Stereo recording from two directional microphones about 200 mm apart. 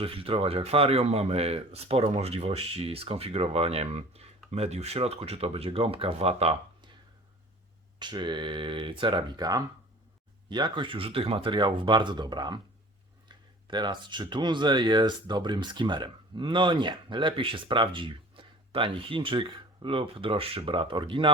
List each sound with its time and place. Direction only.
0.0 s speech: 25° right (ahead or behind)
7.9 s speech: 20° right (ahead or behind)